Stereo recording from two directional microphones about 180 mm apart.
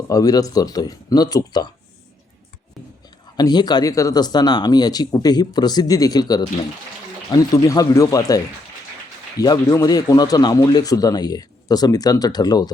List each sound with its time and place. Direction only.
0.1 s speech: 20° left (ahead or behind)
3.3 s speech: 25° left (ahead or behind)
9.4 s speech: 20° left (ahead or behind)